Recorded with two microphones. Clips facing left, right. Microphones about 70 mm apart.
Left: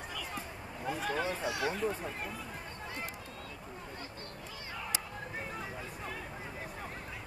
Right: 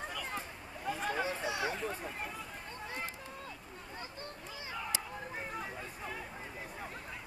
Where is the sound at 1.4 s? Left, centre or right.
Right.